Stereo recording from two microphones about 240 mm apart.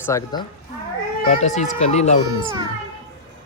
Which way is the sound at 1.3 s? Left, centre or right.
Left.